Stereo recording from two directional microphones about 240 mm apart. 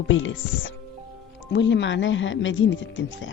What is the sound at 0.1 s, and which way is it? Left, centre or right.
A woman's voice, left.